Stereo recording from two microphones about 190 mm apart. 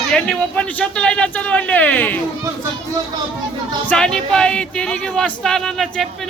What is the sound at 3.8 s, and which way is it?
Speech, 5° left (ahead or behind).